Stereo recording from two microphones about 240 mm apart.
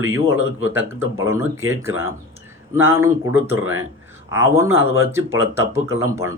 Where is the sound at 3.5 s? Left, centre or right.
Right.